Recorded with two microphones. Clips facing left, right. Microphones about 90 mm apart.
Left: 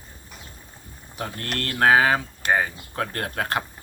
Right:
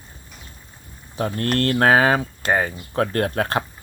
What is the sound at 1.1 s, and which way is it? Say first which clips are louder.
Speech: right 8 dB; 35° right (ahead or behind).